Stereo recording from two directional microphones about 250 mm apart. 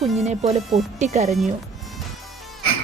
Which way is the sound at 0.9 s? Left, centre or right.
Right.